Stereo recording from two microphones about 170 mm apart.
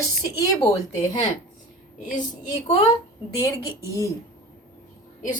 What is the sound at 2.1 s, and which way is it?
Speech, 45° left (ahead or behind).